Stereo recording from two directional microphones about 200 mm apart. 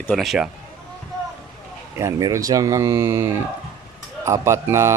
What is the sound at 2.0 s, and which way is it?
Speech, 15° right (ahead or behind).